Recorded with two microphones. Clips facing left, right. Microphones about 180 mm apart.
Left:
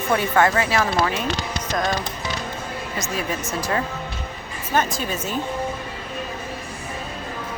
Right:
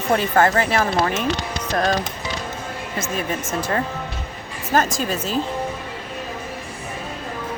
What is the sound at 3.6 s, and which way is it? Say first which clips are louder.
Speech: right 1 dB; 35° right (ahead or behind).